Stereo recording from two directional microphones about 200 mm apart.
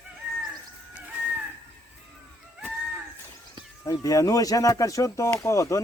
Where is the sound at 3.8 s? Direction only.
15° left (ahead or behind).